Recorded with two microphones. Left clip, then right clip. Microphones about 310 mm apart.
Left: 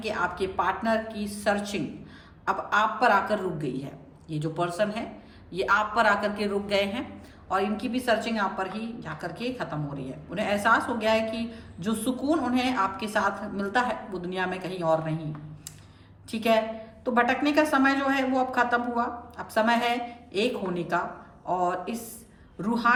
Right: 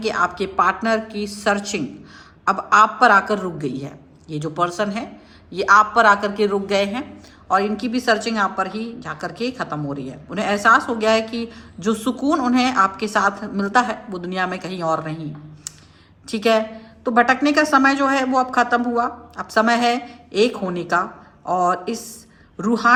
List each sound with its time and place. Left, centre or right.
0.0 s a woman's voice: right
16.3 s a woman's voice: right